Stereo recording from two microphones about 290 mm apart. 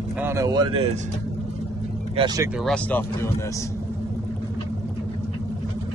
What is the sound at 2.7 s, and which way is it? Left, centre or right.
Speech, centre.